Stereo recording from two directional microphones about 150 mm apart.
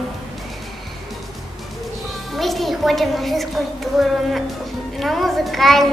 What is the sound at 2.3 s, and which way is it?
A child's voice, centre (ahead or behind).